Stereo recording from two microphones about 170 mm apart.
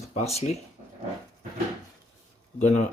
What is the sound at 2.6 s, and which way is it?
Speech, 45° left (ahead or behind).